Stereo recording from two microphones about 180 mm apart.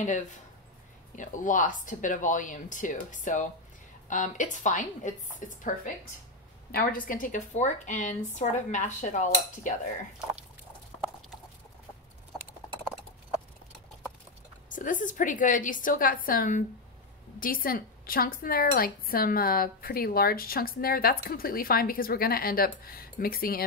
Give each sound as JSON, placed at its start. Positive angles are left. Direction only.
{"t": 1.1, "sound": "a woman's voice", "side_deg": 45}
{"t": 6.7, "sound": "a woman's voice", "side_deg": 55}
{"t": 14.7, "sound": "a woman's voice", "side_deg": 45}